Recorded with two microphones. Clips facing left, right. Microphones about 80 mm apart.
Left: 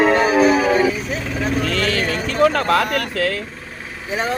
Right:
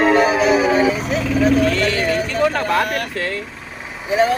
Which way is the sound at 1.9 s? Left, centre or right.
Centre.